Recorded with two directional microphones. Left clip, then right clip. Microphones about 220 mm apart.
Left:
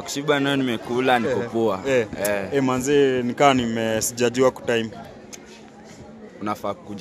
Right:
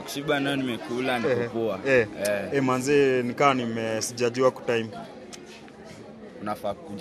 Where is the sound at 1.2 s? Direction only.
5° left (ahead or behind).